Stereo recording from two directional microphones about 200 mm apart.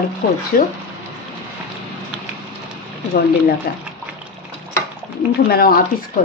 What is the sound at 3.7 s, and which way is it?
Speech, 50° left (ahead or behind).